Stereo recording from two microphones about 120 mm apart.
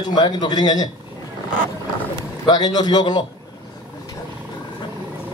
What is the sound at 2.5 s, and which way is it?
Speech, 35° left (ahead or behind).